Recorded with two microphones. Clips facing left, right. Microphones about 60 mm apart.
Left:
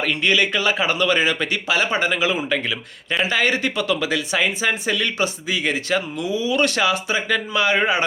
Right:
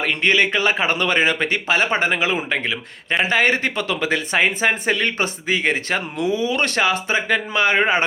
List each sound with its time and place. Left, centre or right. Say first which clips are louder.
0.0 s speech: right 1 dB; right